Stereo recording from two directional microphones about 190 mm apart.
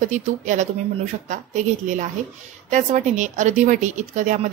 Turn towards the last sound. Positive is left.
turn(degrees=-40)  # may be behind; listen again after turning